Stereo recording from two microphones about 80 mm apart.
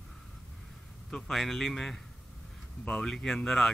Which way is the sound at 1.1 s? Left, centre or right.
Centre.